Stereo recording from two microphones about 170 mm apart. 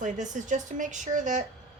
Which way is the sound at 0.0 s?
50° right (ahead or behind).